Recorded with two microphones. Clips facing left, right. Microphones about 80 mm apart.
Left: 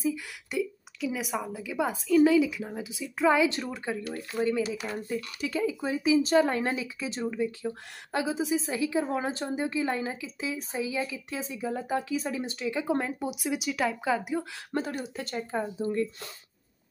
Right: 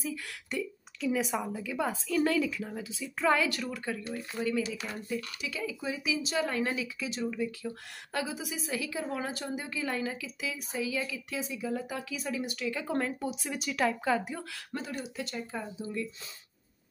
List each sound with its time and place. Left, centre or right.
0.0 s a woman's voice: centre
3.4 s speech: left
5.1 s speech: left; by 14.4 s centre
14.7 s speech: left